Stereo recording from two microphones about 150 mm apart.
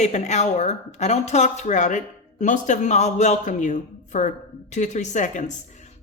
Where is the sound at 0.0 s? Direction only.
50° left (ahead or behind).